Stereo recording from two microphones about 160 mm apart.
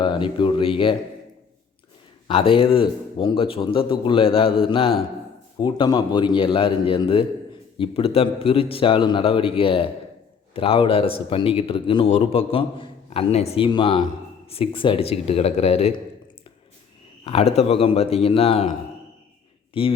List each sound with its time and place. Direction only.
0.0 s a man's voice: 30° left (ahead or behind)
2.2 s a man's voice: 35° left (ahead or behind)
17.2 s a man's voice: 40° left (ahead or behind)
19.8 s a man's voice: 35° left (ahead or behind)